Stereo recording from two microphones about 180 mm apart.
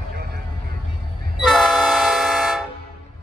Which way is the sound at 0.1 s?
60° right (ahead or behind).